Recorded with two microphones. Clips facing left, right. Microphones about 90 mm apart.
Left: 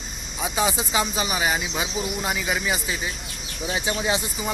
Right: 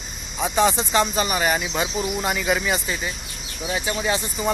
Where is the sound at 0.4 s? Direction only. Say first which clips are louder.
Right 5 dB; 5° left (ahead or behind).